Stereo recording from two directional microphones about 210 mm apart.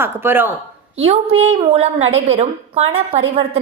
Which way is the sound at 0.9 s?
30° right (ahead or behind).